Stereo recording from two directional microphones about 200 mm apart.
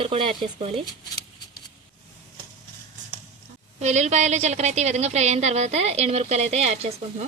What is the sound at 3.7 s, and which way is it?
A woman's voice, 35° right (ahead or behind).